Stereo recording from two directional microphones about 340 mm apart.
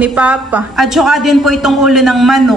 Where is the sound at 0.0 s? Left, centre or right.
Centre.